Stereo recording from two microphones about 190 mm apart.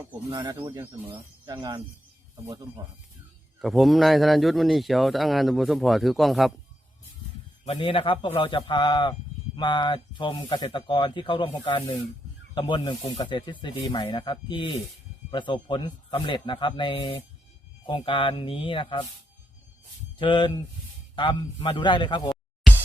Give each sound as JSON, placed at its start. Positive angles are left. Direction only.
{"t": 0.3, "sound": "speech", "side_deg": -20}
{"t": 2.3, "sound": "speech", "side_deg": -20}
{"t": 3.6, "sound": "speech", "side_deg": 0}
{"t": 7.6, "sound": "speech", "side_deg": 30}
{"t": 20.1, "sound": "speech", "side_deg": 25}